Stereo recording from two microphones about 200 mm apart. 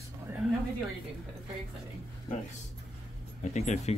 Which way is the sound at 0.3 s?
10° right (ahead or behind).